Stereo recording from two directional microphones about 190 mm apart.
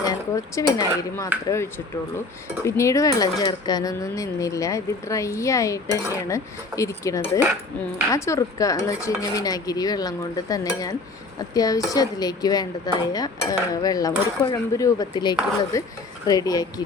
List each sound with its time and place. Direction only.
0.0 s speech: 20° left (ahead or behind)